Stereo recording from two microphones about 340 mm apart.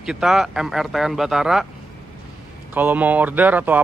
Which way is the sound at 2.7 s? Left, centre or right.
Centre.